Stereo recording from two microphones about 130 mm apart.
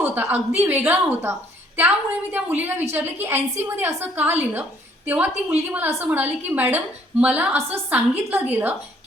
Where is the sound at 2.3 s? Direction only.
15° right (ahead or behind).